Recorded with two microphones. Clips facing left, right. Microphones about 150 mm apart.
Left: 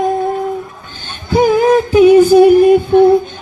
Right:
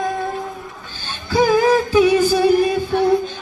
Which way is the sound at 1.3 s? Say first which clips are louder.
Left 4 dB; 20° left (ahead or behind).